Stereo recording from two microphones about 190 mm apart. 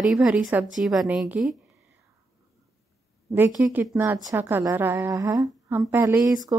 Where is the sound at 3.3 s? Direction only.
10° right (ahead or behind).